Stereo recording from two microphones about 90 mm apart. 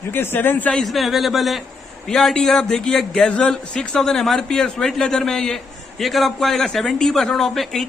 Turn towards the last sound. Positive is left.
turn(degrees=5)  # may be behind; listen again after turning